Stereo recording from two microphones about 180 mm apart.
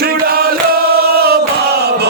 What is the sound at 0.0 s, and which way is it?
Chant, 55° right (ahead or behind).